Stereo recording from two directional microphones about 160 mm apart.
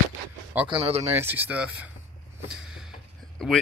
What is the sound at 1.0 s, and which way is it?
Speech, 15° right (ahead or behind).